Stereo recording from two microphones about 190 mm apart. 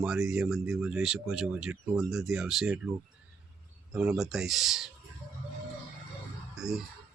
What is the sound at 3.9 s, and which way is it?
Speech, 5° right (ahead or behind).